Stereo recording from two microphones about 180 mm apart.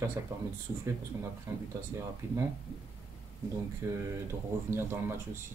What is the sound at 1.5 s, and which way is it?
Speech, 20° right (ahead or behind).